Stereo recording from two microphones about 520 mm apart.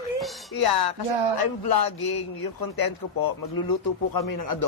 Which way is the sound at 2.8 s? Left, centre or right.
Left.